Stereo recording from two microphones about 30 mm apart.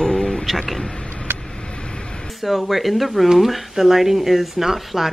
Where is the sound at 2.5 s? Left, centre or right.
Centre.